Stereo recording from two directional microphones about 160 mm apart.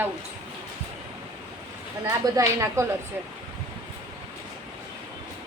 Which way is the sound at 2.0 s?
20° right (ahead or behind).